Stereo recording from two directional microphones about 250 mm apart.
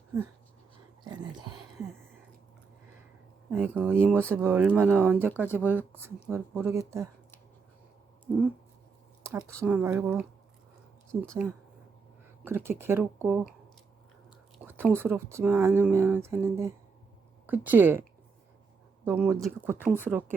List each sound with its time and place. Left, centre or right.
1.0 s speech: centre
3.5 s speech: centre
8.3 s speech: centre
9.6 s speech: centre
12.5 s speech: centre
14.6 s speech: centre
19.0 s speech: centre